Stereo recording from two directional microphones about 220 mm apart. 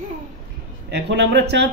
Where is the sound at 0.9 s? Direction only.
50° right (ahead or behind).